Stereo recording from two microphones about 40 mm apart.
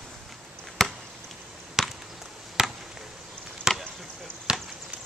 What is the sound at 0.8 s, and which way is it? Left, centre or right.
Chop, centre.